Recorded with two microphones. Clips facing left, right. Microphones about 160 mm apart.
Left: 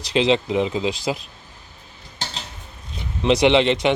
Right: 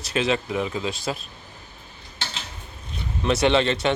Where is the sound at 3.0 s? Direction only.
15° left (ahead or behind).